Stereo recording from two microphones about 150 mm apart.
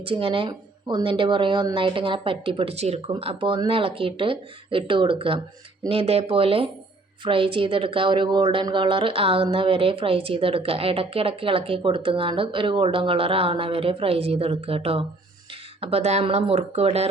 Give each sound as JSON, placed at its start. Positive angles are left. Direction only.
{"t": 0.0, "sound": "a woman's voice", "side_deg": -35}